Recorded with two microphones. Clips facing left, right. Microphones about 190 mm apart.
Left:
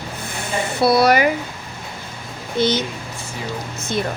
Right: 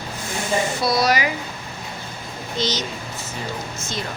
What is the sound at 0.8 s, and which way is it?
Speech, 60° left (ahead or behind).